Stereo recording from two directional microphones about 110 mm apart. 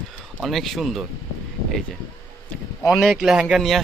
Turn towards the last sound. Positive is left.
turn(degrees=0)  # may be behind; listen again after turning